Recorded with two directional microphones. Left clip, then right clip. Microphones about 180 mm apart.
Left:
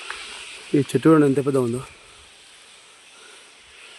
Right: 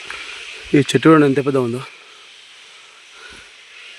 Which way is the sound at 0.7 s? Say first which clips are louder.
Right 5 dB; 20° right (ahead or behind).